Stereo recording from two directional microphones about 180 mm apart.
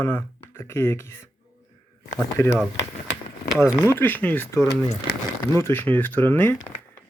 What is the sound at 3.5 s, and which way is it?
Speech, 5° right (ahead or behind).